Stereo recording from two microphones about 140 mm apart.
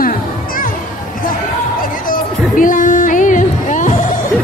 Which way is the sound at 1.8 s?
80° left.